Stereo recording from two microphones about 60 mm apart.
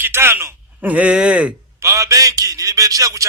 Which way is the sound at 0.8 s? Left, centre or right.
Right.